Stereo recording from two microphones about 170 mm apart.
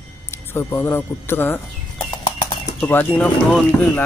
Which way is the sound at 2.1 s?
30° left (ahead or behind).